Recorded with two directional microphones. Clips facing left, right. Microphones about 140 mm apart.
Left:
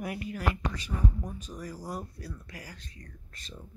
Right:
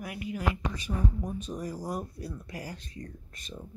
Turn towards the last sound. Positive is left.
turn(degrees=-15)  # may be behind; listen again after turning